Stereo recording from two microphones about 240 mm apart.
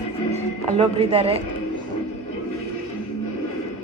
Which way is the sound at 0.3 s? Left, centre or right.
Right.